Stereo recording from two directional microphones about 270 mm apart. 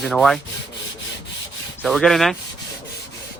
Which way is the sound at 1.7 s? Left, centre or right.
Centre.